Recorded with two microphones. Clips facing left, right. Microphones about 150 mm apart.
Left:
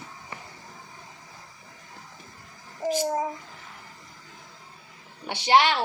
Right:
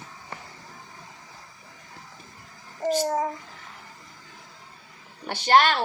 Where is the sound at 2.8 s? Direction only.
10° left (ahead or behind).